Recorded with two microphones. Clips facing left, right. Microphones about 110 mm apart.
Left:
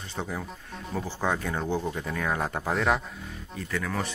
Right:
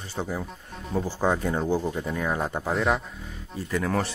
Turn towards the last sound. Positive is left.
turn(degrees=-35)  # may be behind; listen again after turning